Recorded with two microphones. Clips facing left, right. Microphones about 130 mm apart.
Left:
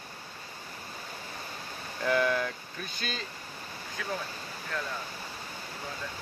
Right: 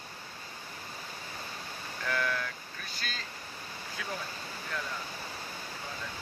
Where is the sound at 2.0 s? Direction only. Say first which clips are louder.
Left 6 dB; 20° left (ahead or behind).